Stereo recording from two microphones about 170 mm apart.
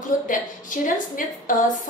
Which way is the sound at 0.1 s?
50° left (ahead or behind).